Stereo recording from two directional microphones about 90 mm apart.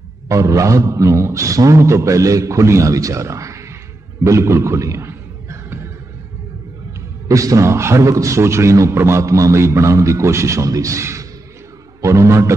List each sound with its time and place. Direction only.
0.3 s a man's voice: 35° right (ahead or behind)
4.2 s a sound: 35° right (ahead or behind)
7.2 s a man's voice: 35° right (ahead or behind)